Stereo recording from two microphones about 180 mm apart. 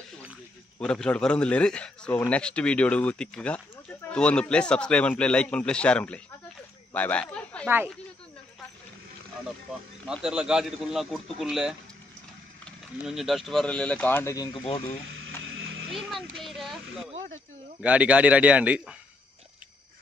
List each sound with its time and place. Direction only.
0.7 s a man's voice: 5° left (ahead or behind)
6.9 s a sound: 10° left (ahead or behind)
7.6 s speech: 10° right (ahead or behind)
10.0 s a man's voice: 5° right (ahead or behind)
13.0 s a man's voice: centre (ahead or behind); by 14.6 s 20° left (ahead or behind)
15.4 s music: 90° right
15.9 s a man's voice: centre (ahead or behind)